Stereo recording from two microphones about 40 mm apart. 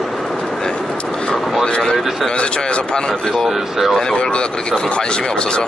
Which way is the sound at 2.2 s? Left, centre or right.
Left.